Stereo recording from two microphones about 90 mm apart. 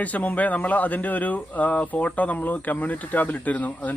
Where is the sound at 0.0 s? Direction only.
15° left (ahead or behind).